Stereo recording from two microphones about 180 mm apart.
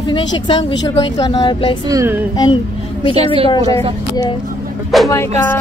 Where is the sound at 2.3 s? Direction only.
25° left (ahead or behind).